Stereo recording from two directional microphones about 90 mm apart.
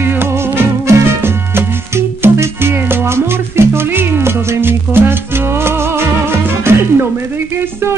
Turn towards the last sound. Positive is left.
turn(degrees=-25)  # may be behind; listen again after turning